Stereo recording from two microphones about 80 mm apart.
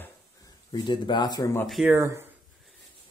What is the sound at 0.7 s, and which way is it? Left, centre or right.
Speech, left.